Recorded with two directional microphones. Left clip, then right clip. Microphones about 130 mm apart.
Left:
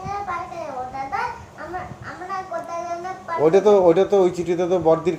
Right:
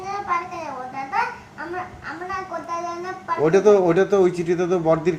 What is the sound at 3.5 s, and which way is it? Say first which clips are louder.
Speech: left 1 dB; 10° right (ahead or behind).